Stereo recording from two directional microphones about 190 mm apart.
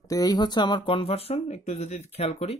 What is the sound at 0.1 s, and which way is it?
Speech, 20° left (ahead or behind).